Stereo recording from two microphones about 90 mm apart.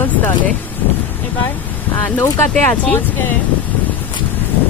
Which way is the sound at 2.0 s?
20° left (ahead or behind).